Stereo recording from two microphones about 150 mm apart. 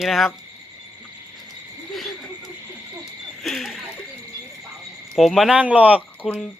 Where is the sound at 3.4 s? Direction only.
Centre (ahead or behind).